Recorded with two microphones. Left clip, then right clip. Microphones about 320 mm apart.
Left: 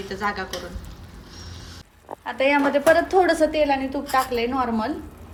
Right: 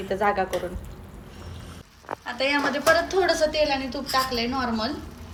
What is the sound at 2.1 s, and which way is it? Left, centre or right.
A woman's voice, left.